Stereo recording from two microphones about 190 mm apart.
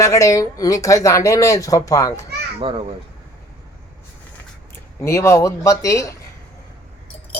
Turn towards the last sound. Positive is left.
turn(degrees=15)  # may be behind; listen again after turning